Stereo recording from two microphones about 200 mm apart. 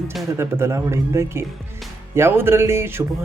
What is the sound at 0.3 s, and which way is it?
Speech, 10° right (ahead or behind).